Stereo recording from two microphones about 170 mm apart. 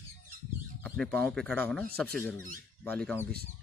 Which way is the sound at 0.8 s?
5° left (ahead or behind).